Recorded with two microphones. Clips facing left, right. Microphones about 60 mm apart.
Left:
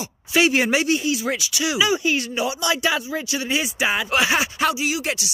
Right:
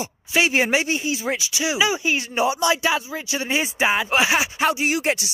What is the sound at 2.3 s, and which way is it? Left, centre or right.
Speech, right.